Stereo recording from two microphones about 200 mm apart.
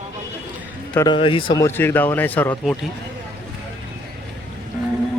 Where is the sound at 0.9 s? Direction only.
25° left (ahead or behind).